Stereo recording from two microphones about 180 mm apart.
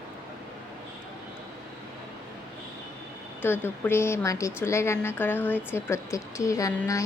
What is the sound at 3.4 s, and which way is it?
Speech, 10° left (ahead or behind).